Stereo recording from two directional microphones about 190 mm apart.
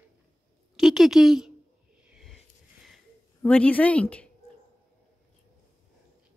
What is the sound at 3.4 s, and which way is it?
Speech, 5° left (ahead or behind).